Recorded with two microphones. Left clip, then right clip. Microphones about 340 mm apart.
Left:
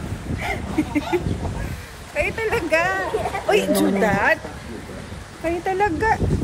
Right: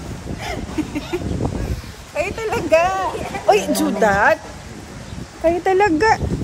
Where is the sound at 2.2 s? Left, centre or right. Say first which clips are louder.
Even; centre.